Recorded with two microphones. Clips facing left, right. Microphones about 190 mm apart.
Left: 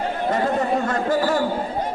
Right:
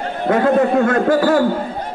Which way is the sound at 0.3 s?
60° right (ahead or behind).